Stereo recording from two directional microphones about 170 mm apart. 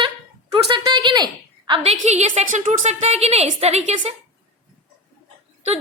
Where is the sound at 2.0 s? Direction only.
40° right (ahead or behind).